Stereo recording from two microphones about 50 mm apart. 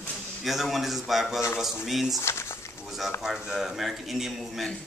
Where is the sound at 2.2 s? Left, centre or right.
Left.